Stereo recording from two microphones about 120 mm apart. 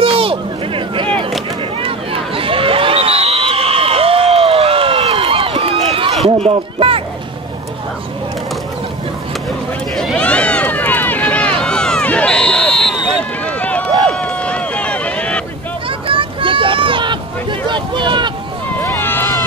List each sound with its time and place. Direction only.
0.0 s a sound: 50° right (ahead or behind)
5.9 s run: 50° right (ahead or behind)
10.1 s run: 10° left (ahead or behind)
16.1 s boat: 45° right (ahead or behind)
18.8 s run: 15° left (ahead or behind)